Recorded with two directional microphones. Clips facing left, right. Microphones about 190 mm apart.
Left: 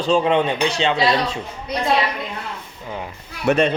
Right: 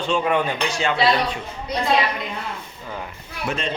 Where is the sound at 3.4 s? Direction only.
65° left (ahead or behind).